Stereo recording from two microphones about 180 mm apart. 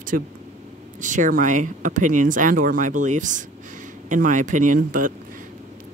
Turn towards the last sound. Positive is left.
turn(degrees=-50)  # may be behind; listen again after turning